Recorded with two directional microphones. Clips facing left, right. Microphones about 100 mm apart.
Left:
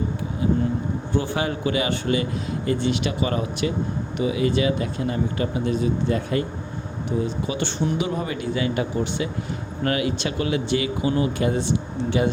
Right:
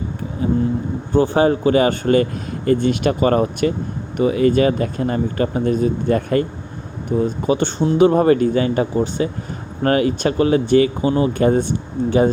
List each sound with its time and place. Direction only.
0.4 s vehicle: 35° right (ahead or behind)
1.1 s speech: 40° right (ahead or behind)
8.0 s speech: 50° right (ahead or behind)